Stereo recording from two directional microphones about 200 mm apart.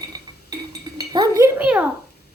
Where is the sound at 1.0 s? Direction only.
20° right (ahead or behind).